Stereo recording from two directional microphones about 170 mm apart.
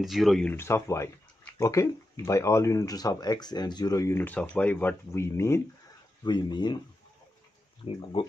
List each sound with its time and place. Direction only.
0.0 s speech: centre (ahead or behind); by 5.6 s 15° left (ahead or behind)
6.2 s speech: 25° left (ahead or behind)
7.8 s speech: 35° left (ahead or behind)